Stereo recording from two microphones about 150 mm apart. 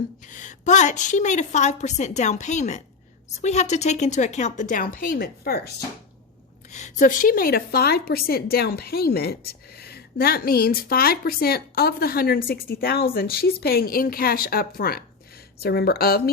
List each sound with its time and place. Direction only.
0.3 s a woman's voice: 55° left (ahead or behind); by 5.7 s 90° left
6.7 s a woman's voice: 50° left (ahead or behind); by 16.3 s 90° left